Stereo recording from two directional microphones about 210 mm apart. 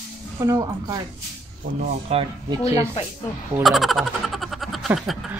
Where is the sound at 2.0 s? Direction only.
25° right (ahead or behind).